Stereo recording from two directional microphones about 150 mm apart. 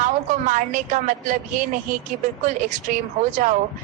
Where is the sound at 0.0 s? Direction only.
60° right (ahead or behind).